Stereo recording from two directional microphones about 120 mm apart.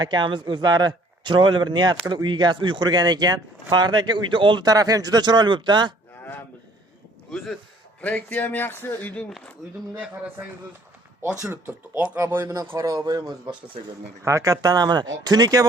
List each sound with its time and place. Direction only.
0.0 s speech: 40° right (ahead or behind)
7.3 s speech: 5° left (ahead or behind)
11.5 s a man's voice: 15° right (ahead or behind); by 15.6 s 35° right (ahead or behind)